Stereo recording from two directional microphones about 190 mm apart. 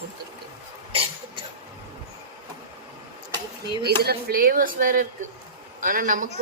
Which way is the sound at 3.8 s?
55° right (ahead or behind).